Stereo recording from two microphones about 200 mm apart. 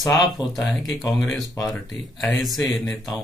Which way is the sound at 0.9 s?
Centre (ahead or behind).